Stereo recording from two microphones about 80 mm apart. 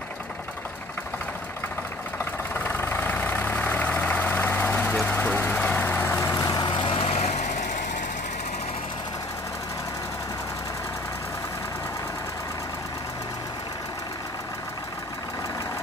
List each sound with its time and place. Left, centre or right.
2.5 s vehicle: left
6.3 s vehicle: left
6.6 s vehicle: left